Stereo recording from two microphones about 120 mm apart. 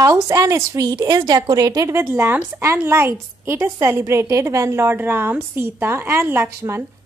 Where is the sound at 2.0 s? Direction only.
20° right (ahead or behind).